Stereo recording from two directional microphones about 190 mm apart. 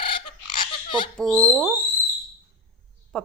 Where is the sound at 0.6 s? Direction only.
25° left (ahead or behind).